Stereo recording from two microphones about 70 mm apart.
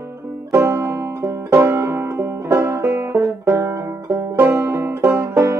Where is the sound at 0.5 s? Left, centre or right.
Right.